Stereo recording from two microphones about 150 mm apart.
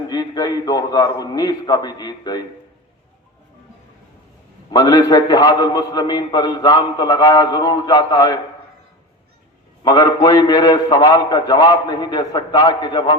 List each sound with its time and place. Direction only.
0.1 s a man's voice: 25° left (ahead or behind)
4.7 s a man's voice: 25° left (ahead or behind)
9.8 s a man's voice: 25° left (ahead or behind)